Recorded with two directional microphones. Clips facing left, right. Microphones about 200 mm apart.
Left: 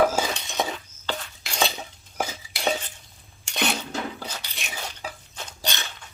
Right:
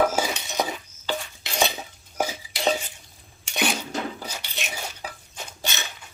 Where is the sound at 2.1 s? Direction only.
10° right (ahead or behind).